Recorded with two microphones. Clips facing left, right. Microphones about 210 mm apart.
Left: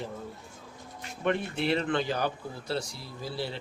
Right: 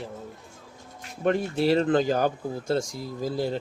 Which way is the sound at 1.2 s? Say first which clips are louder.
Right 5 dB; 40° right (ahead or behind).